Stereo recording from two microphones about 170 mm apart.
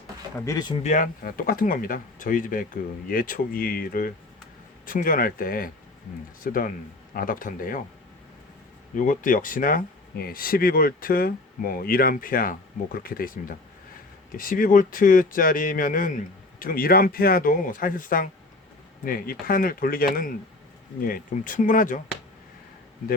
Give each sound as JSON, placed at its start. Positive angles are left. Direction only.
{"t": 0.3, "sound": "speech", "side_deg": 20}
{"t": 0.8, "sound": "speech", "side_deg": 45}
{"t": 9.0, "sound": "speech", "side_deg": 50}